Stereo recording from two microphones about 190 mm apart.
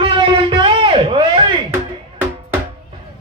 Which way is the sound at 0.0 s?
25° right (ahead or behind).